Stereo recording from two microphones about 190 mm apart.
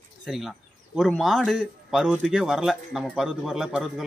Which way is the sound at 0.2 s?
Centre (ahead or behind).